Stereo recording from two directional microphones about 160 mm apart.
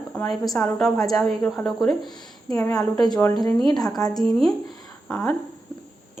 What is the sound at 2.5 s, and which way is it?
A woman's voice, 20° left (ahead or behind).